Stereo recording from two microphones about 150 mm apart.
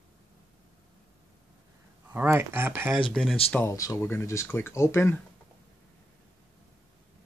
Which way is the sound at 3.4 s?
10° left (ahead or behind).